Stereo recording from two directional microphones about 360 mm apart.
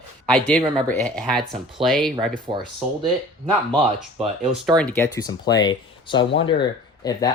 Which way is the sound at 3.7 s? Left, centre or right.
Centre.